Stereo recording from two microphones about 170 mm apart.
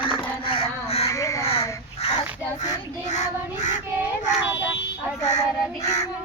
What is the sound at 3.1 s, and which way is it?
Child singing, 45° left (ahead or behind).